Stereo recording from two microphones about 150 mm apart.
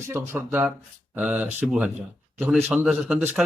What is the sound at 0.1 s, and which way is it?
A man's voice, 15° right (ahead or behind).